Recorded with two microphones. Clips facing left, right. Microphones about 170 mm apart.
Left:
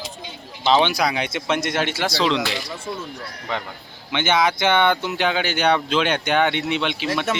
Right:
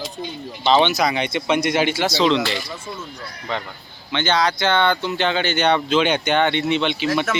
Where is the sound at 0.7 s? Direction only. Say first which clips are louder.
Right 1 dB; 5° left (ahead or behind).